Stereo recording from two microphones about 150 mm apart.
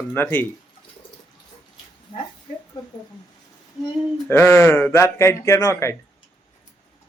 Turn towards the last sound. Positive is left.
turn(degrees=20)  # may be behind; listen again after turning